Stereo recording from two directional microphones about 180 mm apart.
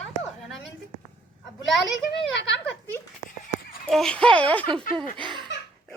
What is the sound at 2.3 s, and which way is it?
Speech, 85° left.